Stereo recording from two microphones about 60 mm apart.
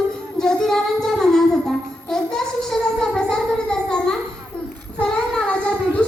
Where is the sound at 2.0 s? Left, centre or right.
Centre.